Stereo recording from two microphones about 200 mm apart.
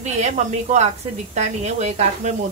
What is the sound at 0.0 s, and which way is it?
Speech, 35° right (ahead or behind).